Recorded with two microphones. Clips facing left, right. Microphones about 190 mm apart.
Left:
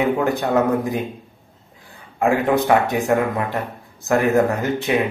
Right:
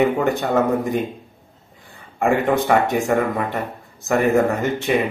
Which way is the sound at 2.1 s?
Centre (ahead or behind).